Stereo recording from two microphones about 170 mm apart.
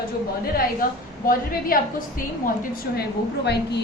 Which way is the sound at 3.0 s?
75° left (ahead or behind).